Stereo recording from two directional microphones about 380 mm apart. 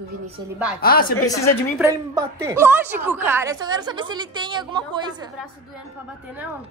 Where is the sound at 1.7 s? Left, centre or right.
Centre.